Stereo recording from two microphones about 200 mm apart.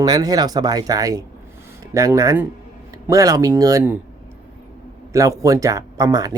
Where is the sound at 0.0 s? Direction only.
20° right (ahead or behind).